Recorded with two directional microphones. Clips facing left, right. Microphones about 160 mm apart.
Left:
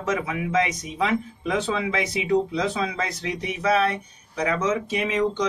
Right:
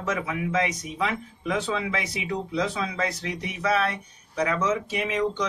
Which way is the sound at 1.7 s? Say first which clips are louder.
Left 4 dB; 20° left (ahead or behind).